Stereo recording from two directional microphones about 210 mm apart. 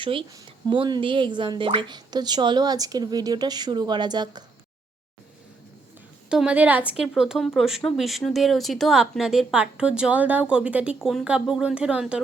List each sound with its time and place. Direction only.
0.0 s speech: 25° right (ahead or behind)
6.2 s speech: 5° right (ahead or behind)